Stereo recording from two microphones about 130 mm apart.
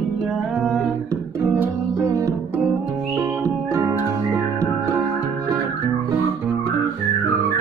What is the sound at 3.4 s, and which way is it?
Music, 20° right (ahead or behind).